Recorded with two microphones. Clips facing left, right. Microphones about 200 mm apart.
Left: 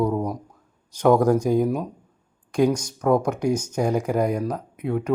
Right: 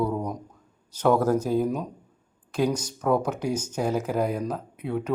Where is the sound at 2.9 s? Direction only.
10° left (ahead or behind).